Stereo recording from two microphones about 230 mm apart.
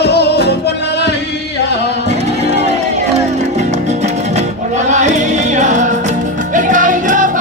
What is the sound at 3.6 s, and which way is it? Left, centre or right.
Music, right.